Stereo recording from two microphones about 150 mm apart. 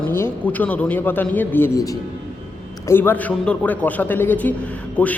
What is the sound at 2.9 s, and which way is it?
A man's voice, 15° left (ahead or behind).